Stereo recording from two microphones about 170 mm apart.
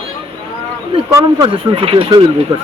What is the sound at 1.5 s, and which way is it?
Speech, 35° right (ahead or behind).